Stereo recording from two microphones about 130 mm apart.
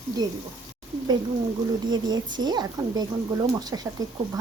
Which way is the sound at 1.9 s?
35° right (ahead or behind).